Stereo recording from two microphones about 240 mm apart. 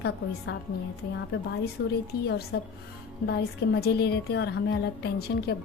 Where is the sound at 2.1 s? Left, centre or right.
Left.